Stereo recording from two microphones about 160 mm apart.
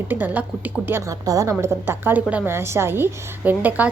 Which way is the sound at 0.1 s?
10° right (ahead or behind).